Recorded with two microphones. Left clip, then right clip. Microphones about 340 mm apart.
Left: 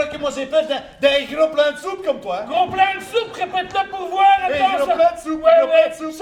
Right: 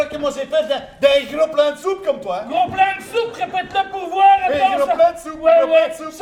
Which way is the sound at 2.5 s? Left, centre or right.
Left.